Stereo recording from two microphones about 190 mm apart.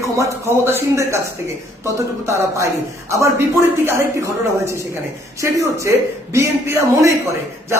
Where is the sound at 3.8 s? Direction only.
15° right (ahead or behind).